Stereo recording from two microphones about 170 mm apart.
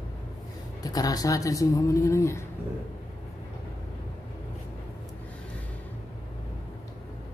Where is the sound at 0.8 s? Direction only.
20° left (ahead or behind).